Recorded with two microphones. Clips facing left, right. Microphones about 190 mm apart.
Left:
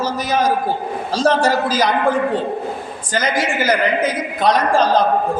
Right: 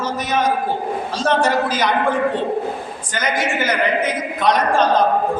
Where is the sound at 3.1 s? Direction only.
35° left (ahead or behind).